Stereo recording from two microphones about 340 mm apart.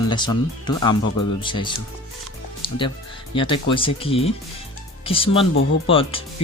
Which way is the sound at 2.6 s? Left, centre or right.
Centre.